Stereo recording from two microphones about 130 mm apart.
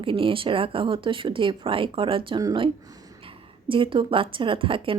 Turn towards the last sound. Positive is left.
turn(degrees=-40)  # may be behind; listen again after turning